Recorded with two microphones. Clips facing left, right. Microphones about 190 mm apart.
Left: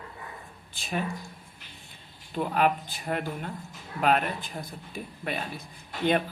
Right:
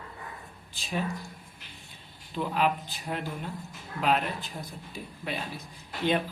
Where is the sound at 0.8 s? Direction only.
55° left (ahead or behind).